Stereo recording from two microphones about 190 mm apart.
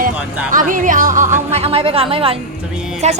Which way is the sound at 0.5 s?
45° right (ahead or behind).